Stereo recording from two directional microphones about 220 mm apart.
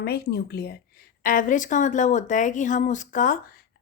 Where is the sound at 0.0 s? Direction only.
45° left (ahead or behind).